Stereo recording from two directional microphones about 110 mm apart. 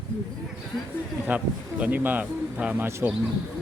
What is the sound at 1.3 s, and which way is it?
Speech, 15° right (ahead or behind).